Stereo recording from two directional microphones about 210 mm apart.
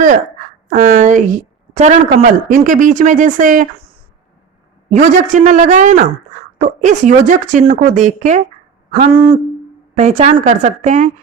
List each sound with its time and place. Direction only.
0.7 s a woman's voice: 40° right (ahead or behind)
4.9 s a woman's voice: 35° right (ahead or behind)
9.0 s a sound: 25° right (ahead or behind)
9.9 s a woman's voice: 35° right (ahead or behind)